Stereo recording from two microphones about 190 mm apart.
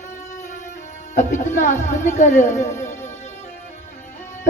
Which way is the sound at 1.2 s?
40° left (ahead or behind).